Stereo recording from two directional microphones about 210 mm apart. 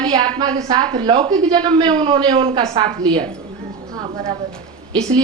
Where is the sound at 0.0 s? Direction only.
20° right (ahead or behind).